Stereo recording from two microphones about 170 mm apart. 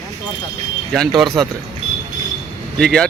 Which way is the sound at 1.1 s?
Centre (ahead or behind).